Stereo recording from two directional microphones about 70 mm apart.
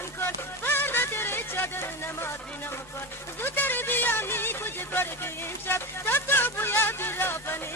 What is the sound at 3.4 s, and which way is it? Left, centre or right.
Music, left.